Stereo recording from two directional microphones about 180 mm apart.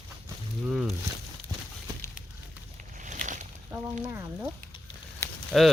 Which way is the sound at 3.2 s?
45° right (ahead or behind).